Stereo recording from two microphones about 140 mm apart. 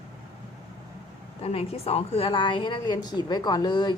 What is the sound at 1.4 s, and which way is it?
A woman's voice, 45° left (ahead or behind).